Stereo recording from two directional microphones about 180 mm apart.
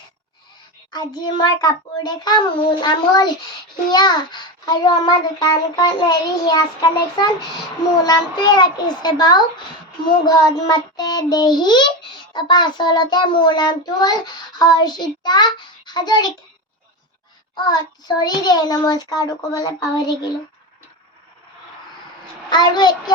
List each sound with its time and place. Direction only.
0.9 s child singing: 25° left (ahead or behind)
8.0 s child singing: 25° left (ahead or behind)
17.5 s child singing: 25° left (ahead or behind)
22.4 s child singing: 25° left (ahead or behind)